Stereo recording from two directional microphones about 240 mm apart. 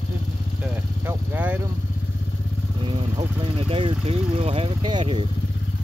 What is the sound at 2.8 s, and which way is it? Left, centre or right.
Speech, right.